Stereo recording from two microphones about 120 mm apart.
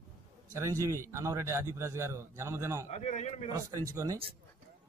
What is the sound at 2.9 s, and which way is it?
Speech, 65° left (ahead or behind).